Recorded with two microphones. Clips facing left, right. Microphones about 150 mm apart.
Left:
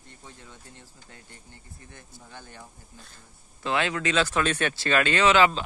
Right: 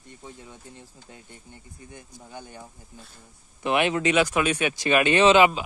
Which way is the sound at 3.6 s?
20° right (ahead or behind).